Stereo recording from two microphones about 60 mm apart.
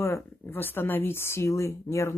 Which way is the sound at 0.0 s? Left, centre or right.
Left.